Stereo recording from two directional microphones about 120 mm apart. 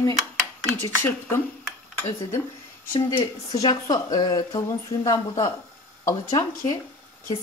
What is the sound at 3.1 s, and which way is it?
Speech, 35° left (ahead or behind).